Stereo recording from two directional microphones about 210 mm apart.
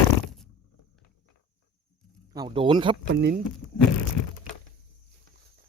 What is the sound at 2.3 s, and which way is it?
Speech, 25° right (ahead or behind).